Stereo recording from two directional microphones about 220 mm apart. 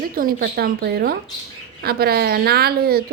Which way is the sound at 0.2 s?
40° right (ahead or behind).